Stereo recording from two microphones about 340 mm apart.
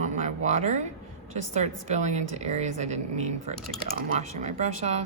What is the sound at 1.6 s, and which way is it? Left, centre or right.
A woman's voice, centre.